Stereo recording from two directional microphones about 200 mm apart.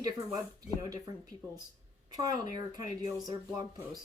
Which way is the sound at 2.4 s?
35° left (ahead or behind).